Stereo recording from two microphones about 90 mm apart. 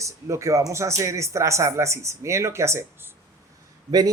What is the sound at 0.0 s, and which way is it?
Speech, 35° right (ahead or behind).